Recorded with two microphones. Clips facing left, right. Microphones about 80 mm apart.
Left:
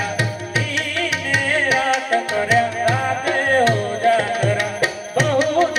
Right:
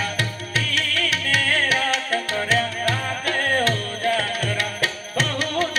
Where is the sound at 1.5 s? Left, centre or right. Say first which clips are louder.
Left 4 dB; centre.